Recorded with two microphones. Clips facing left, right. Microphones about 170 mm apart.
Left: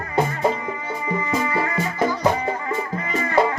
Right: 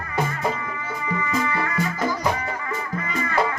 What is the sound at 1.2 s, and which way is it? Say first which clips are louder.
Music: left 1 dB; 30° left (ahead or behind).